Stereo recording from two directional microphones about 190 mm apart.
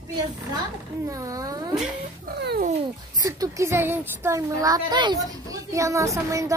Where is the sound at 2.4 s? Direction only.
55° right (ahead or behind).